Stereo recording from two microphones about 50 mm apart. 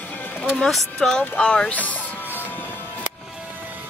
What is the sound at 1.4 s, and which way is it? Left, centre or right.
Speech, centre.